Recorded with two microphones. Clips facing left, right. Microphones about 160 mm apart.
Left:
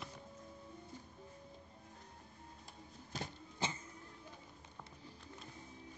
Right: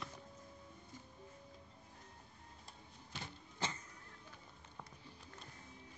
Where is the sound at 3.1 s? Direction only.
40° left (ahead or behind).